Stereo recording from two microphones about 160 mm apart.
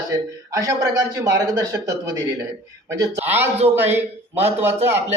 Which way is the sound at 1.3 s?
20° right (ahead or behind).